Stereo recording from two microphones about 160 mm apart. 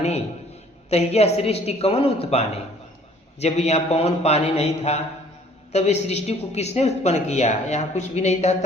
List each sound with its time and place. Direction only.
0.9 s a man's voice: 40° left (ahead or behind)